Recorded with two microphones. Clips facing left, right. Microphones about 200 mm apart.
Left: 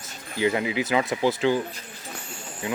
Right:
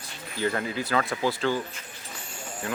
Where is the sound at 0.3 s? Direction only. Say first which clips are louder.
Left 4 dB; 15° left (ahead or behind).